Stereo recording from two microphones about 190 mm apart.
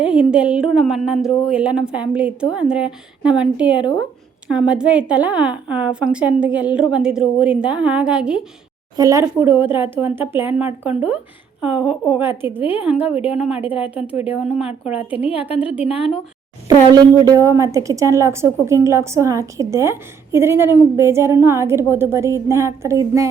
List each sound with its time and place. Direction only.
0.0 s a woman's voice: 5° right (ahead or behind)
9.0 s a woman's voice: 15° right (ahead or behind); by 14.7 s centre (ahead or behind)
14.9 s a woman's voice: 30° left (ahead or behind)
15.4 s a woman's voice: 10° right (ahead or behind)
16.6 s a woman's voice: 20° right (ahead or behind)